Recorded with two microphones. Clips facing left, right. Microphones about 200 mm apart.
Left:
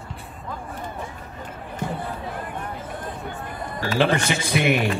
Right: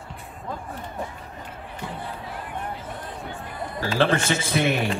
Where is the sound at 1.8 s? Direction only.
50° left (ahead or behind).